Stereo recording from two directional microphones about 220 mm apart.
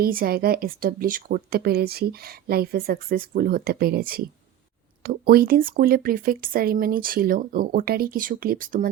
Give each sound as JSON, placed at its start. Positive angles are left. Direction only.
{"t": 0.0, "sound": "speech", "side_deg": -40}